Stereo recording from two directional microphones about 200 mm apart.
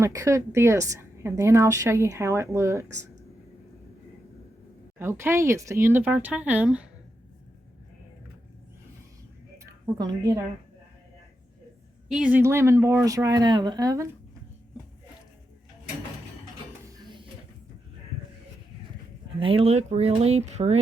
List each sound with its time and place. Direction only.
0.0 s a woman's voice: 15° right (ahead or behind)
4.9 s a woman's voice: 10° right (ahead or behind)
9.8 s a woman's voice: 20° right (ahead or behind)
12.0 s a woman's voice: 5° right (ahead or behind)
19.4 s speech: 25° right (ahead or behind)